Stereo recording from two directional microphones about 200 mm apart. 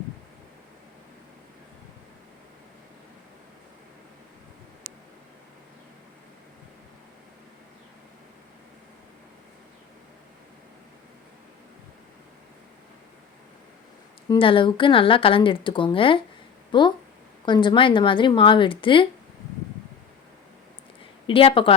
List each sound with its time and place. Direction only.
14.3 s speech: 25° left (ahead or behind)
21.2 s speech: 25° left (ahead or behind)